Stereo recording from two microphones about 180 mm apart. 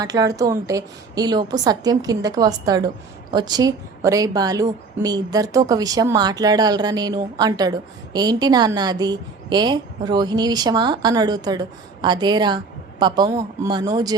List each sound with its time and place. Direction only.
0.0 s a woman's voice: 20° right (ahead or behind)